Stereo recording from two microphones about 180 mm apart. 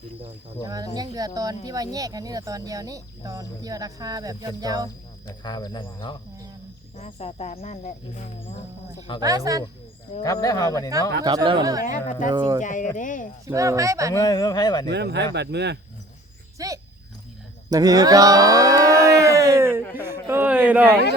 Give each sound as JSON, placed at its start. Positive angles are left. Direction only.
{"t": 0.6, "sound": "speech", "side_deg": -20}
{"t": 5.4, "sound": "speech", "side_deg": 25}
{"t": 6.9, "sound": "speech", "side_deg": 35}
{"t": 9.2, "sound": "speech", "side_deg": -20}
{"t": 10.2, "sound": "speech", "side_deg": 20}
{"t": 11.2, "sound": "speech", "side_deg": -20}
{"t": 12.6, "sound": "speech", "side_deg": 45}
{"t": 13.5, "sound": "speech", "side_deg": -20}
{"t": 14.1, "sound": "speech", "side_deg": 20}
{"t": 14.8, "sound": "speech", "side_deg": -70}
{"t": 16.6, "sound": "dog", "side_deg": -20}
{"t": 17.7, "sound": "a sound", "side_deg": -20}